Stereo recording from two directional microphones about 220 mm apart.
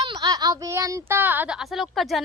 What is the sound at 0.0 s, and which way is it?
Speech, 20° right (ahead or behind).